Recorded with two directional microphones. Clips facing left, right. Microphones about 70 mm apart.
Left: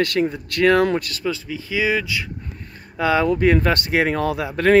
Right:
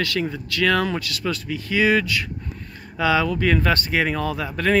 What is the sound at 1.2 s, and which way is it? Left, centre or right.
Speech, centre.